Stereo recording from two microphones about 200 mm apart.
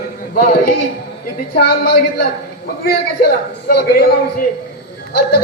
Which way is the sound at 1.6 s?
55° left (ahead or behind).